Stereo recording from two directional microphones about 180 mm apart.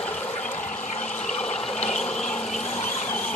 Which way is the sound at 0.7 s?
40° left (ahead or behind).